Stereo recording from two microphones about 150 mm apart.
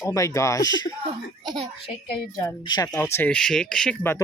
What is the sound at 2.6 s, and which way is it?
Speech, 30° left (ahead or behind).